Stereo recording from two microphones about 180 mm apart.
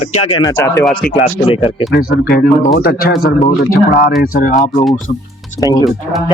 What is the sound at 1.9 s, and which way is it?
Speech, 60° left (ahead or behind).